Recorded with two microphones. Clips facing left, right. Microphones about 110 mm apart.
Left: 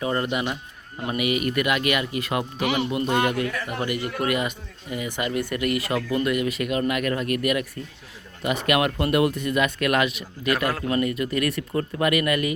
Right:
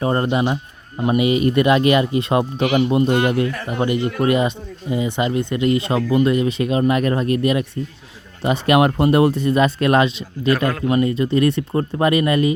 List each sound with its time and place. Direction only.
0.0 s speech: 35° right (ahead or behind)